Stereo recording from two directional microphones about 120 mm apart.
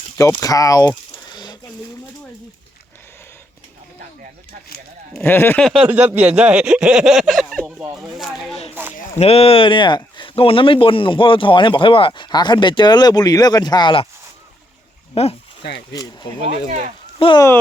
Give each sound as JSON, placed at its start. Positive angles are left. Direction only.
{"t": 0.2, "sound": "a sound", "side_deg": 25}
{"t": 5.2, "sound": "speech", "side_deg": 20}
{"t": 5.5, "sound": "speech", "side_deg": 0}
{"t": 5.8, "sound": "speech", "side_deg": -15}
{"t": 9.1, "sound": "speech", "side_deg": 55}
{"t": 15.1, "sound": "speech", "side_deg": 55}
{"t": 15.9, "sound": "speech", "side_deg": 35}
{"t": 17.2, "sound": "speech", "side_deg": 45}